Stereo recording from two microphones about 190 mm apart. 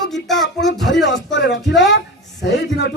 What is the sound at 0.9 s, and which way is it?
Speech, 65° left (ahead or behind).